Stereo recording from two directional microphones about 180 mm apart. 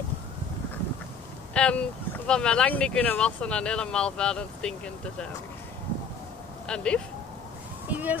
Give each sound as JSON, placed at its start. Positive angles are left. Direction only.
{"t": 1.5, "sound": "speech", "side_deg": 5}
{"t": 6.7, "sound": "speech", "side_deg": 5}
{"t": 7.9, "sound": "speech", "side_deg": -10}